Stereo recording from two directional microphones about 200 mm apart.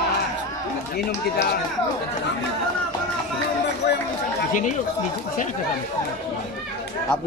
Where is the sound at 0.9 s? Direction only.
55° left (ahead or behind).